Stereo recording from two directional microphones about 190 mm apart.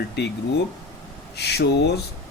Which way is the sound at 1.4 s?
60° left (ahead or behind).